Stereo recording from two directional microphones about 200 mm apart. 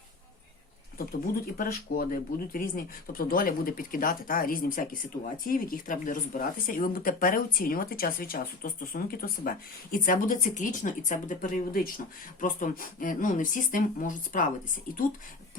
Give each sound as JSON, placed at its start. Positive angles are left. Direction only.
{"t": 1.5, "sound": "speech", "side_deg": 45}